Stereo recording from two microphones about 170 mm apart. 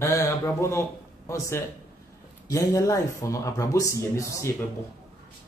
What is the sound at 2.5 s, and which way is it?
Speech, 20° left (ahead or behind).